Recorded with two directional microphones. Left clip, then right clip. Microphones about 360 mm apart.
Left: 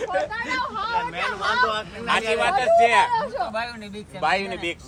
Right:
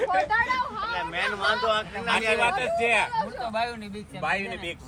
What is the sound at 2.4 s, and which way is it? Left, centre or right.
Speech, centre.